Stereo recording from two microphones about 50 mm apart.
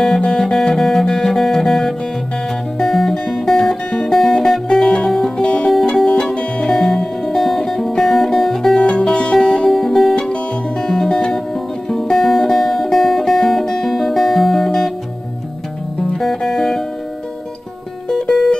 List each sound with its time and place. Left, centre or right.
0.0 s guitar: centre
2.8 s music: centre
8.7 s music: centre
9.7 s music: centre
16.1 s music: centre
18.0 s music: centre